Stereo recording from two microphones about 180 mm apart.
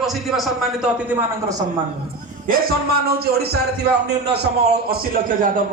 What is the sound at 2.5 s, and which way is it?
Speech, 55° right (ahead or behind).